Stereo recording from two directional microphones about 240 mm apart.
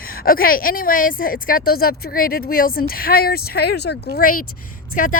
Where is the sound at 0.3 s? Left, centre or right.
Left.